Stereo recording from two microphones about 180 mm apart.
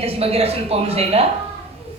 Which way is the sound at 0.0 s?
35° right (ahead or behind).